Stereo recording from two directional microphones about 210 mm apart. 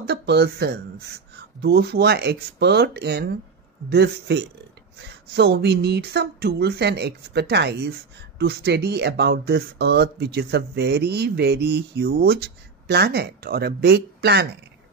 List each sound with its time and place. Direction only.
0.0 s speech: 50° right (ahead or behind)